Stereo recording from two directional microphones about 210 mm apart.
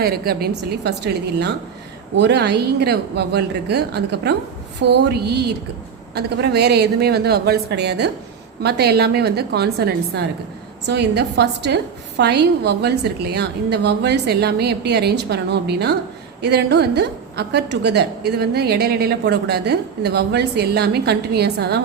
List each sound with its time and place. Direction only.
0.0 s a woman's voice: 50° right (ahead or behind)